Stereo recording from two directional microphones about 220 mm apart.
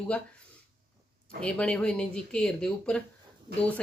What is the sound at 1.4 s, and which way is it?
Speech, 5° left (ahead or behind).